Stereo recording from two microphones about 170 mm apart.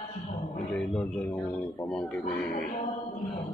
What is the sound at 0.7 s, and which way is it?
Speech, 5° left (ahead or behind).